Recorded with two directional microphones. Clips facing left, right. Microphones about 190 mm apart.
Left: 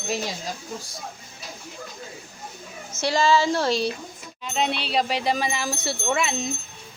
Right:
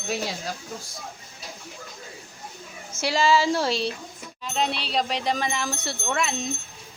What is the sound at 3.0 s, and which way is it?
Speech, centre (ahead or behind).